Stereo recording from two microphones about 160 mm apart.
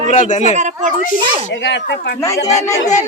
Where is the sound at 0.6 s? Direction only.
50° right (ahead or behind).